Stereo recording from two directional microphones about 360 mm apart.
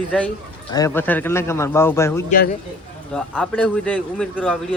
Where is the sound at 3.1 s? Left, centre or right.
Centre.